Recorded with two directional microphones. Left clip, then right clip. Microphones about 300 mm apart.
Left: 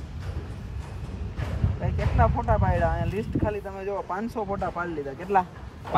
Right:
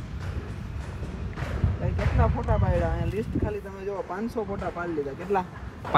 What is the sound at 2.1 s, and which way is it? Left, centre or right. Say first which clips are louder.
Speech: left 5 dB; centre.